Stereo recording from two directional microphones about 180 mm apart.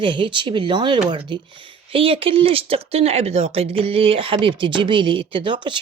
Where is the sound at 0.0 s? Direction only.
25° right (ahead or behind).